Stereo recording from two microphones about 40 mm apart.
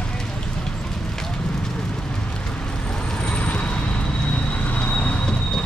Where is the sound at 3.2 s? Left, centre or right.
Left.